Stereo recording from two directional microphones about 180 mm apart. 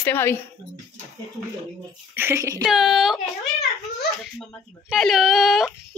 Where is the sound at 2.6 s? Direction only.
Centre (ahead or behind).